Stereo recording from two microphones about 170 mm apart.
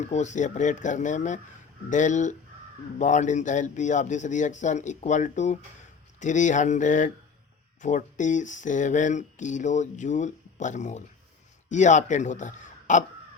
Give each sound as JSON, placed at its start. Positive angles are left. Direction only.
{"t": 0.0, "sound": "speech", "side_deg": 45}